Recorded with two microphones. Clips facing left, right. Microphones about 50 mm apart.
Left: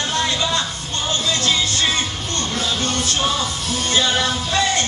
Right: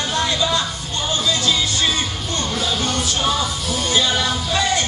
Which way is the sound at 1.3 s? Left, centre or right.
Left.